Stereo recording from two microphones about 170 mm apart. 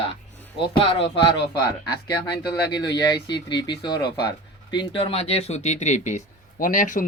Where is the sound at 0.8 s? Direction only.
30° left (ahead or behind).